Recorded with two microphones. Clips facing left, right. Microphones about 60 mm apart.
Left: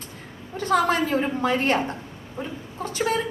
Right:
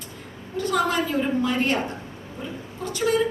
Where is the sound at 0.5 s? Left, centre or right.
Left.